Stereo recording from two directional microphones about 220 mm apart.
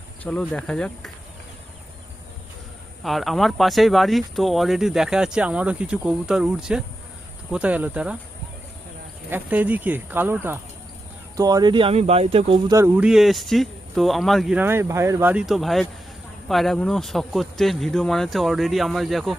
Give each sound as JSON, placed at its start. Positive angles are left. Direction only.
{"t": 0.2, "sound": "speech", "side_deg": 5}
{"t": 3.0, "sound": "speech", "side_deg": 0}
{"t": 9.3, "sound": "speech", "side_deg": -5}
{"t": 12.7, "sound": "speech", "side_deg": -10}